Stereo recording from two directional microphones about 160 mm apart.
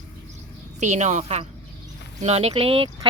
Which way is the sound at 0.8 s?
45° right (ahead or behind).